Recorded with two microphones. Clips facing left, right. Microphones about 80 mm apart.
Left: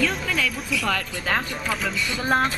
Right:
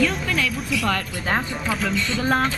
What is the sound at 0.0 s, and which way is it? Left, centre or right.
Music, centre.